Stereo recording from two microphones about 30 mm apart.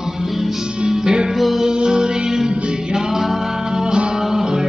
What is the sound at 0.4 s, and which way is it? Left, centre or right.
Music, centre.